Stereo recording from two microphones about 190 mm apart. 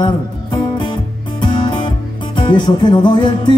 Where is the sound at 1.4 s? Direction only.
25° left (ahead or behind).